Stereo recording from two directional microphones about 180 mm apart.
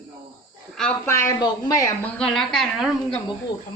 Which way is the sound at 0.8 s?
10° left (ahead or behind).